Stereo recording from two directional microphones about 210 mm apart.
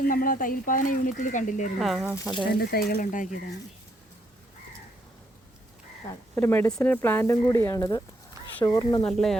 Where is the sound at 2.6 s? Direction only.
45° left (ahead or behind).